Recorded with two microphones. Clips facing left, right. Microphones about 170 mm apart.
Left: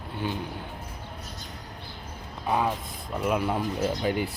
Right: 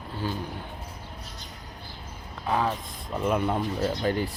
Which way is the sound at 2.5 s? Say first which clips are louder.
Even; 15° left (ahead or behind).